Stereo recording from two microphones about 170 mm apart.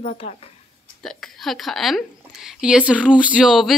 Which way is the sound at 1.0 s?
Centre (ahead or behind).